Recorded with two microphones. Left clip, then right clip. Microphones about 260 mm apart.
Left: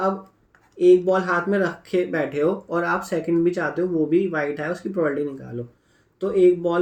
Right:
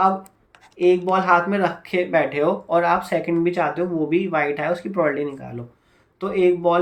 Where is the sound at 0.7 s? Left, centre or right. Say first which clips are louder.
Left 1 dB; centre.